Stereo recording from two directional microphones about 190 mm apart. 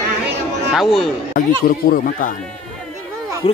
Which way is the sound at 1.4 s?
50° left (ahead or behind).